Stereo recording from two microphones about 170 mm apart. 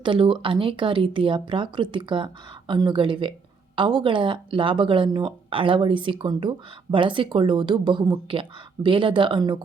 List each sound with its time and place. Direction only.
0.0 s speech: 30° right (ahead or behind)